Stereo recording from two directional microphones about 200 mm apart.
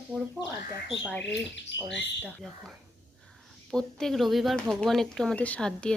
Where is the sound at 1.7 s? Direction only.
65° left (ahead or behind).